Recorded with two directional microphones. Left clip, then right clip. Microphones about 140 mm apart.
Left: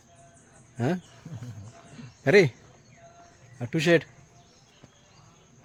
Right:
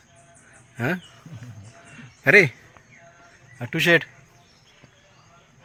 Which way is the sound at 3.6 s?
15° left (ahead or behind).